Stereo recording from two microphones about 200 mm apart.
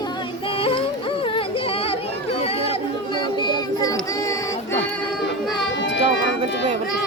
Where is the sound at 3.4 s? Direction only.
20° left (ahead or behind).